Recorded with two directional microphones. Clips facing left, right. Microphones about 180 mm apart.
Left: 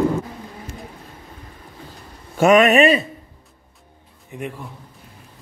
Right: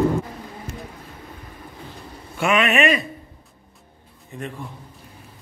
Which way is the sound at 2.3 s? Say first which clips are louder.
Left 7 dB; 40° left (ahead or behind).